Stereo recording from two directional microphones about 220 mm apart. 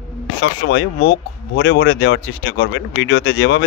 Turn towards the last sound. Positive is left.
turn(degrees=55)  # may be behind; listen again after turning